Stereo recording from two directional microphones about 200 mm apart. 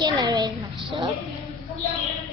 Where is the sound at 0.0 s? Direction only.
20° right (ahead or behind).